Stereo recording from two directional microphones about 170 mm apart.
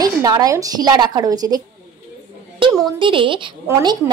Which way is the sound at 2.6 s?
30° right (ahead or behind).